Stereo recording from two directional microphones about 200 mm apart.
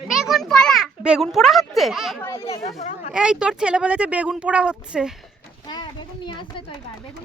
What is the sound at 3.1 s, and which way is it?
A child's voice, 5° right (ahead or behind).